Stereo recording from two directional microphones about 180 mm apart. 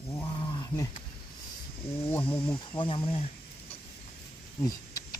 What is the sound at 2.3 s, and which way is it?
Speech, 30° left (ahead or behind).